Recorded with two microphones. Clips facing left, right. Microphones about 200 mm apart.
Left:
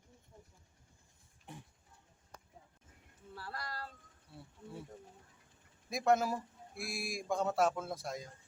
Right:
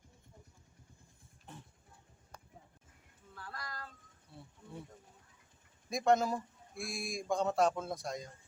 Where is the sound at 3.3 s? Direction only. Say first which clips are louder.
Left 2 dB; 35° left (ahead or behind).